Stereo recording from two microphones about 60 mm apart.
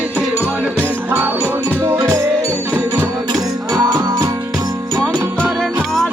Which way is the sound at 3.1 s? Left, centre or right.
Right.